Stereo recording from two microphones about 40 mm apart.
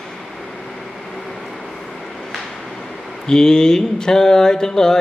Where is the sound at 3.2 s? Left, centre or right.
Centre.